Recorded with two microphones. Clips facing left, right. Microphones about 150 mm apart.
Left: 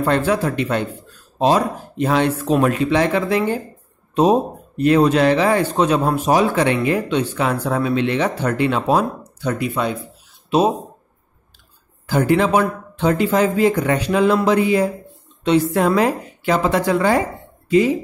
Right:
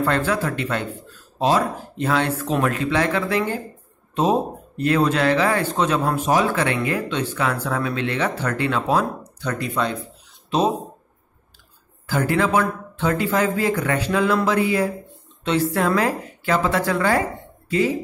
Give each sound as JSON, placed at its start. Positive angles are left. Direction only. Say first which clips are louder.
{"t": 0.0, "sound": "speech", "louder": "left 3 dB", "side_deg": 15}
{"t": 12.1, "sound": "speech", "louder": "left 4 dB", "side_deg": 15}
{"t": 15.7, "sound": "speech", "louder": "left 4 dB", "side_deg": 15}